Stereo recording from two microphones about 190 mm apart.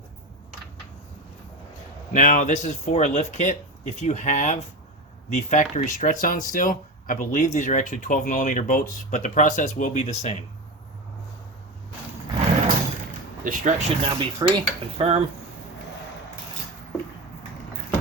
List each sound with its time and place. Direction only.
2.1 s speech: 45° left (ahead or behind)
13.4 s cutlery: 45° right (ahead or behind)